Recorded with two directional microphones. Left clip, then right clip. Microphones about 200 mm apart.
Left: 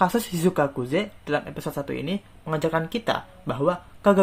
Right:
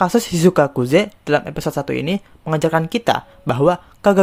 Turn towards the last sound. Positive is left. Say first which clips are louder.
# right 5 dB
turn(degrees=-50)  # may be behind; listen again after turning